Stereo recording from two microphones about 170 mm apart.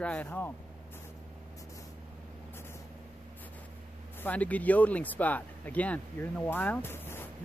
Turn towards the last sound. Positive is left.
turn(degrees=15)  # may be behind; listen again after turning